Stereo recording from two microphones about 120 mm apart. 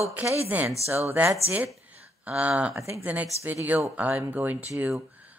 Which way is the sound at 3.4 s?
15° right (ahead or behind).